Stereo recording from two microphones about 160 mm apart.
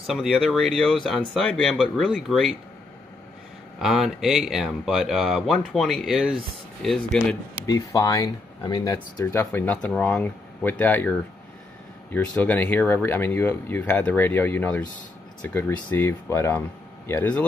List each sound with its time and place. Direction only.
0.0 s speech: centre (ahead or behind)
3.8 s speech: centre (ahead or behind)
7.6 s speech: 20° left (ahead or behind)
8.9 s speech: 15° left (ahead or behind)